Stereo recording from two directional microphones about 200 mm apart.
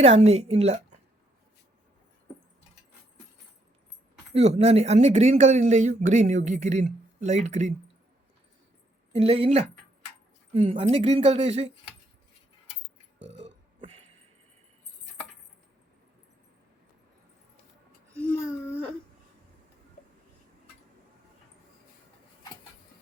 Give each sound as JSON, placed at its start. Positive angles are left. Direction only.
{"t": 0.0, "sound": "speech", "side_deg": -30}
{"t": 4.4, "sound": "speech", "side_deg": -30}
{"t": 9.1, "sound": "speech", "side_deg": -30}
{"t": 13.1, "sound": "burping", "side_deg": -60}
{"t": 18.2, "sound": "a sound", "side_deg": 10}